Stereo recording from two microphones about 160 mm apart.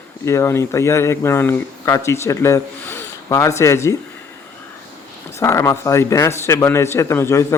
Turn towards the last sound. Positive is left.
turn(degrees=15)  # may be behind; listen again after turning